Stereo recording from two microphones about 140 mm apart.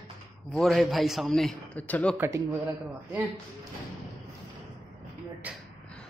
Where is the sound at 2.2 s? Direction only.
20° right (ahead or behind).